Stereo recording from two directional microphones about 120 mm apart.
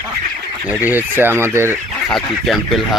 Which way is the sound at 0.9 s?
15° right (ahead or behind).